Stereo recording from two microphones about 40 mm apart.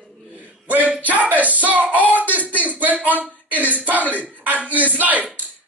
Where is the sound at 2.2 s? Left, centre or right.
Right.